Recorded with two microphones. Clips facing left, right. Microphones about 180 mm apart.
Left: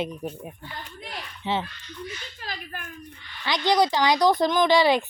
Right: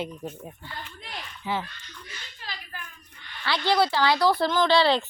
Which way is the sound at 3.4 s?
15° left (ahead or behind).